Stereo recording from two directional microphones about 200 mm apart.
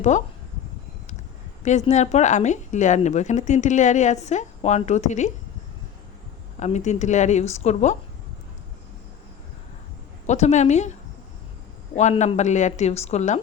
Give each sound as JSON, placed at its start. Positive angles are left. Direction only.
{"t": 1.6, "sound": "a woman's voice", "side_deg": 35}
{"t": 6.6, "sound": "a woman's voice", "side_deg": 35}
{"t": 10.2, "sound": "a woman's voice", "side_deg": 35}
{"t": 11.9, "sound": "a woman's voice", "side_deg": 35}